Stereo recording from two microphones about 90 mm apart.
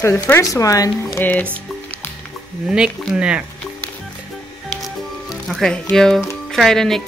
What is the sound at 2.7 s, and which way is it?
Speech, 10° right (ahead or behind).